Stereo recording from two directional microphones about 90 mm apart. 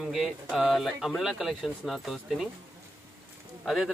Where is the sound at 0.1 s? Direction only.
5° right (ahead or behind).